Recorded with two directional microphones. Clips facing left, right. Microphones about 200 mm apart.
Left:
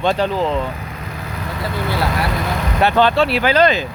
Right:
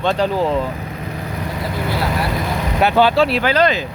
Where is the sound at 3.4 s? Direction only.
25° left (ahead or behind).